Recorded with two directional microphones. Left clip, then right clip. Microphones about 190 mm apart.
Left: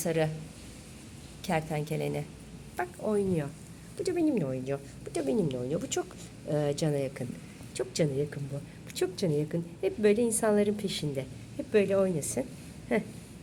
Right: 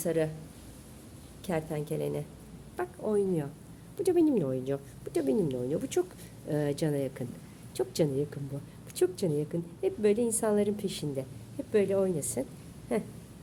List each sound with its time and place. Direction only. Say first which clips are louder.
0.0 s a woman's voice: even; 5° right (ahead or behind)
1.5 s a woman's voice: left 2 dB; 10° right (ahead or behind)
4.0 s a woman's voice: right 3 dB; 35° right (ahead or behind)
9.0 s a woman's voice: right 1 dB; 10° right (ahead or behind)